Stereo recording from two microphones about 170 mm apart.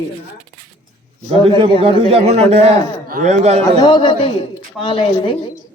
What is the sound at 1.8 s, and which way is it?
A man's voice, 35° right (ahead or behind).